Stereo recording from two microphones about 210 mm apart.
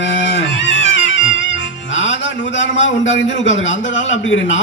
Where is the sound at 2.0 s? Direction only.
60° left (ahead or behind).